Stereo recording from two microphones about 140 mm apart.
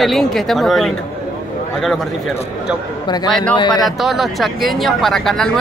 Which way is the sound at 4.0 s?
Centre (ahead or behind).